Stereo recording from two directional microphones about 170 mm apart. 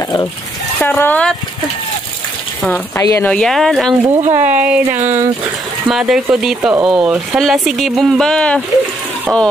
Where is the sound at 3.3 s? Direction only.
5° left (ahead or behind).